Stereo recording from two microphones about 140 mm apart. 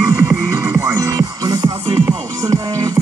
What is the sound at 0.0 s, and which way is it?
Music, 20° right (ahead or behind).